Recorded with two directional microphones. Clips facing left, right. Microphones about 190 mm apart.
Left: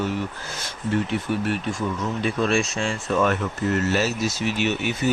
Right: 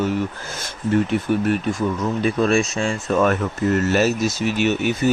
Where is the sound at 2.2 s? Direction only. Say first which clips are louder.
Right 4 dB; 45° right (ahead or behind).